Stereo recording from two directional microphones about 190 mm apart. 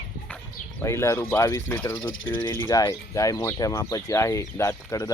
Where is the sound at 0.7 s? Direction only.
15° left (ahead or behind).